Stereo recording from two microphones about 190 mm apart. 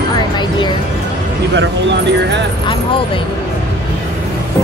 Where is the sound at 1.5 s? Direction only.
65° right (ahead or behind).